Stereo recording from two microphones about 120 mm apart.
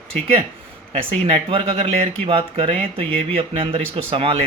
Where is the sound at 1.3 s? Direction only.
50° right (ahead or behind).